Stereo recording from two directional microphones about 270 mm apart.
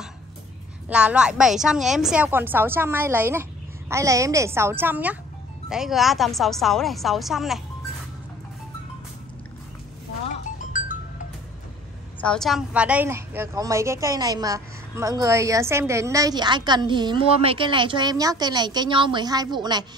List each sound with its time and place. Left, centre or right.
0.8 s a woman's voice: centre
10.6 s music: left
12.2 s a woman's voice: centre